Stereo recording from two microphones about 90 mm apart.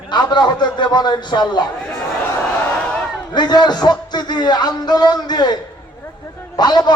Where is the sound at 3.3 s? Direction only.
55° left (ahead or behind).